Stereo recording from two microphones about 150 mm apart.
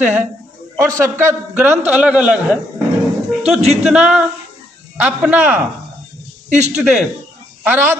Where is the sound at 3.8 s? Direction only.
5° right (ahead or behind).